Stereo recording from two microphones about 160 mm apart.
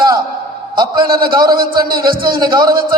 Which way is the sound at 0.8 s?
30° right (ahead or behind).